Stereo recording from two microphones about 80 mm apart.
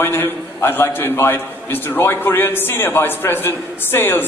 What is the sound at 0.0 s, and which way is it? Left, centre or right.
A man's voice, left.